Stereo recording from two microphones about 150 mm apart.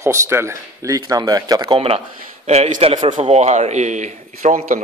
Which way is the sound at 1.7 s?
40° right (ahead or behind).